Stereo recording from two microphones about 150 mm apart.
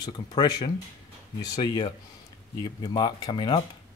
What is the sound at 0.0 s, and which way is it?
Speech, 30° left (ahead or behind).